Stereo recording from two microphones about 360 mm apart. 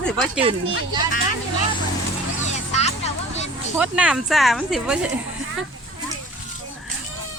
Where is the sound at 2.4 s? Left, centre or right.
Centre.